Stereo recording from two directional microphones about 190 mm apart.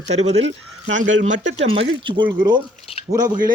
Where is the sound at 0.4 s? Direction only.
85° right.